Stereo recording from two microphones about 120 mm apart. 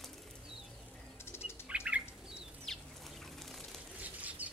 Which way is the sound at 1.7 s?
10° right (ahead or behind).